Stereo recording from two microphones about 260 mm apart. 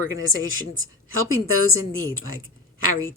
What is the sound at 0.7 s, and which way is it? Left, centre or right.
Speech, right.